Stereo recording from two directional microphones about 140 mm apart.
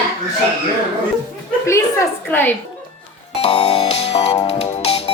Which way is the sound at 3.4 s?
45° left (ahead or behind).